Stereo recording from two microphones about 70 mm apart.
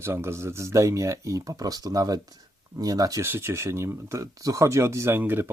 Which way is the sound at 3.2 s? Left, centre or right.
Right.